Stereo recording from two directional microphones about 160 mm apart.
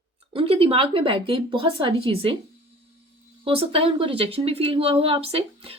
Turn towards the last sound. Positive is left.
turn(degrees=-35)  # may be behind; listen again after turning